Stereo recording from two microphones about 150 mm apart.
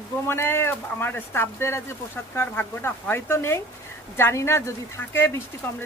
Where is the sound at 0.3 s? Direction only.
15° left (ahead or behind).